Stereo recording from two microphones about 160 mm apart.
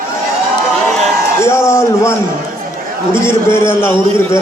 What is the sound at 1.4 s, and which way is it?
A man's voice, 15° left (ahead or behind).